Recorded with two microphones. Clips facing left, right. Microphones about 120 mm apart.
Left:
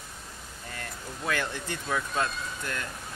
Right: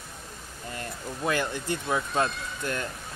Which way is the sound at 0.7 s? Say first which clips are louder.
Right 4 dB; 25° right (ahead or behind).